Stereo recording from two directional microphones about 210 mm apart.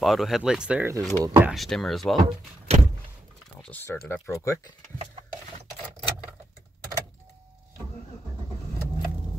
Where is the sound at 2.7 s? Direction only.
30° right (ahead or behind).